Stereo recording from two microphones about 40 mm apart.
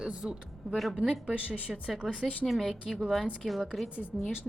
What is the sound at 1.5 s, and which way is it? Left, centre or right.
Speech, left.